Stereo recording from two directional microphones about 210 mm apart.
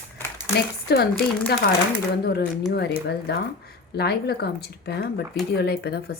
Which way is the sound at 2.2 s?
50° left (ahead or behind).